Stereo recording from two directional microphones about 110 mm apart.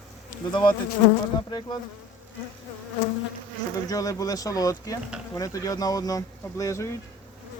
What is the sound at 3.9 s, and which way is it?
Speech, 35° left (ahead or behind).